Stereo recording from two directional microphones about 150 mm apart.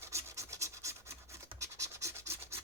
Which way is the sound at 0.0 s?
15° right (ahead or behind).